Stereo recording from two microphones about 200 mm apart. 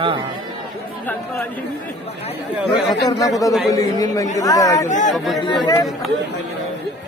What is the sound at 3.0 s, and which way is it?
Speech, 15° left (ahead or behind).